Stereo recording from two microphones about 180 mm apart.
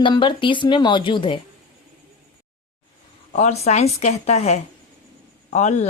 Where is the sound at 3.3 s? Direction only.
40° left (ahead or behind).